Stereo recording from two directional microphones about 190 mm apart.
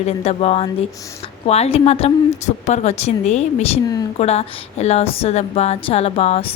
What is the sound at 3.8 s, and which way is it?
Speech, 20° left (ahead or behind).